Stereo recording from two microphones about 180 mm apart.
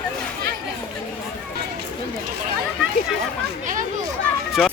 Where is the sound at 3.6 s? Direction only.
45° right (ahead or behind).